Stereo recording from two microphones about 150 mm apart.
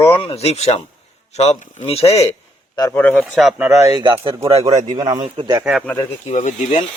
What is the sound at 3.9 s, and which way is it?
A man's voice, 30° right (ahead or behind).